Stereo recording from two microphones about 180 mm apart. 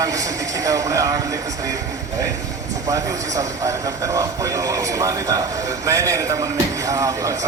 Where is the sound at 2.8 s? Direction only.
20° right (ahead or behind).